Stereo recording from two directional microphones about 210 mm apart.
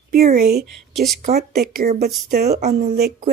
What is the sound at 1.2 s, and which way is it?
Speech, 45° right (ahead or behind).